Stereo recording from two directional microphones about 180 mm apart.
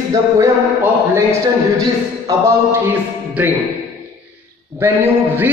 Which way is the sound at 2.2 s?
15° right (ahead or behind).